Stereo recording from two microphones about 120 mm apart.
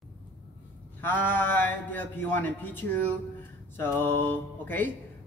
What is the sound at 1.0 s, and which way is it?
Speech, 15° left (ahead or behind).